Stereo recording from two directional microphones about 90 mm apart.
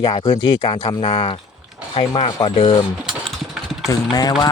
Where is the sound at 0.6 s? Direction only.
50° left (ahead or behind).